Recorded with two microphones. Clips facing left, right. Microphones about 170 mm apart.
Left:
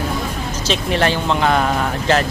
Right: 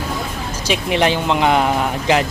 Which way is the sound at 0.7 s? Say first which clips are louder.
Right 1 dB; 15° right (ahead or behind).